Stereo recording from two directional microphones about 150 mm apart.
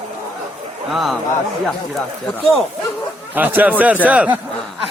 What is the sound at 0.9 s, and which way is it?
Speech, centre (ahead or behind).